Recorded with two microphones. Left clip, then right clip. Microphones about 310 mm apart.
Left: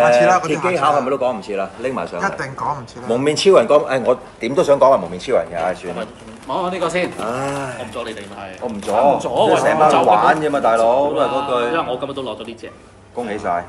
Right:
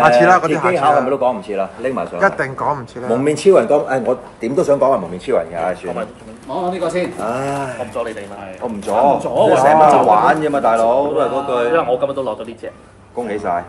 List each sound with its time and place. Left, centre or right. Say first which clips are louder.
0.0 s a man's voice: right 2 dB; centre
4.5 s a man's voice: left 1 dB; centre
6.5 s speech: even; centre
7.0 s a man's voice: right 1 dB; centre